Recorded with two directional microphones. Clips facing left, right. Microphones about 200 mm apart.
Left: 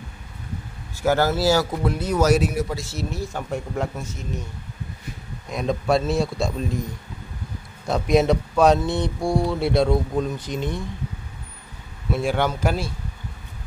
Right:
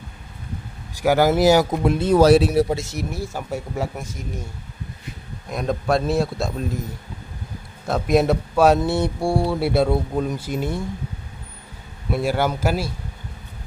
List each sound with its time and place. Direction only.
1.0 s speech: 15° right (ahead or behind); by 2.8 s 30° right (ahead or behind)
2.8 s speech: 15° right (ahead or behind)
5.5 s a man's voice: centre (ahead or behind)
12.2 s speech: 5° right (ahead or behind)